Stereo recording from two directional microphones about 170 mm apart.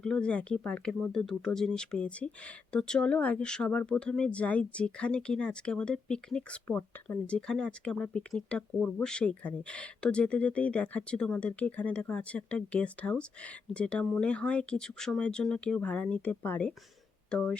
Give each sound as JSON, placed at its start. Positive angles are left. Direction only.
{"t": 0.0, "sound": "speech", "side_deg": 5}